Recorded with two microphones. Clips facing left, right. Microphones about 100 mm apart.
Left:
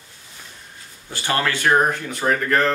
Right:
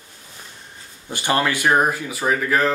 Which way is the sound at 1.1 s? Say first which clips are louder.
Right 2 dB; 15° right (ahead or behind).